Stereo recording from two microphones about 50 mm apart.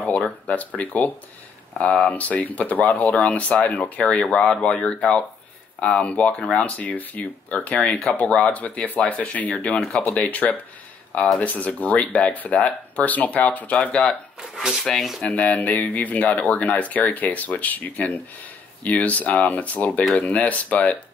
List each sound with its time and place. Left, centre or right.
0.0 s a sound: left
0.7 s speech: left
9.8 s speech: centre
10.1 s speech: left
13.0 s speech: left
14.5 s speech: centre
14.9 s speech: centre
15.2 s speech: left